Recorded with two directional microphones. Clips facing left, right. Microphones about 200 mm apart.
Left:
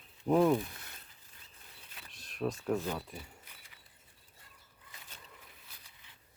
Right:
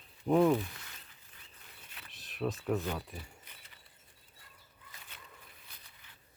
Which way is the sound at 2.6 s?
Centre (ahead or behind).